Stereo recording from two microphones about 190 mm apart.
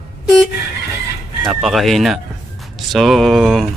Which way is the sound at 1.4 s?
Centre (ahead or behind).